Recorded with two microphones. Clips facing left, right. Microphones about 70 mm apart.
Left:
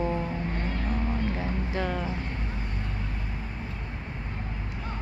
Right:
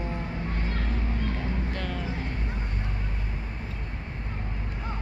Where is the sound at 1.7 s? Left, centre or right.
Centre.